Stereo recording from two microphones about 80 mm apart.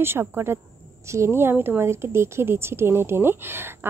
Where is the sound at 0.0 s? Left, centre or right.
Right.